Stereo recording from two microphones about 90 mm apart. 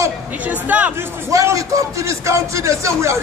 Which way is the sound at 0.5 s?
15° right (ahead or behind).